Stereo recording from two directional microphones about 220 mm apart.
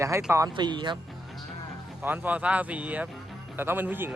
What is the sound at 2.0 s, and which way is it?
Speech, 10° right (ahead or behind).